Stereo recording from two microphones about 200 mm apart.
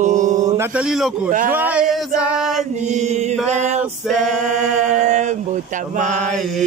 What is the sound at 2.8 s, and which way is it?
Speech, 35° right (ahead or behind).